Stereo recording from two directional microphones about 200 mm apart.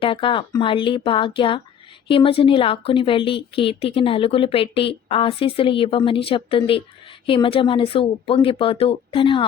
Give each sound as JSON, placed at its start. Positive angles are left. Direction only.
{"t": 0.0, "sound": "a woman's voice", "side_deg": 25}